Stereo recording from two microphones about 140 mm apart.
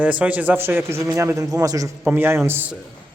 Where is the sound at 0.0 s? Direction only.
10° right (ahead or behind).